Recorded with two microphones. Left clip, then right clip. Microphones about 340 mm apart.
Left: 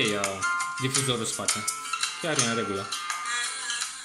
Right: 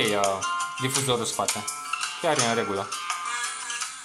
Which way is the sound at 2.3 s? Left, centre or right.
Right.